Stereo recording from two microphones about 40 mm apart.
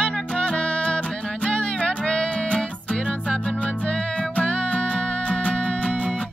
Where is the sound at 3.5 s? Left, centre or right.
Left.